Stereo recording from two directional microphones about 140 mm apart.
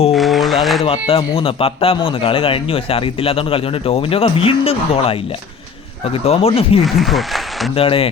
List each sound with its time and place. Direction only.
0.1 s a sound: centre (ahead or behind)
0.9 s speech: 40° left (ahead or behind)
6.2 s speech: 45° left (ahead or behind)
6.8 s speech: centre (ahead or behind)
7.8 s speech: 40° left (ahead or behind)